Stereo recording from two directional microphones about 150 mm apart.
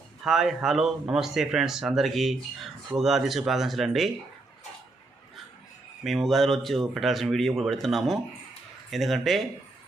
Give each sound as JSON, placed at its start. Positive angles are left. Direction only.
{"t": 0.3, "sound": "speech", "side_deg": 0}
{"t": 6.0, "sound": "speech", "side_deg": 0}